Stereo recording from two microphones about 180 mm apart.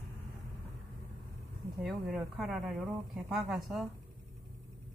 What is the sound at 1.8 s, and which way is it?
Speech, 5° right (ahead or behind).